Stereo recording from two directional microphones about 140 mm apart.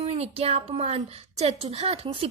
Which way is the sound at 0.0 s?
45° right (ahead or behind).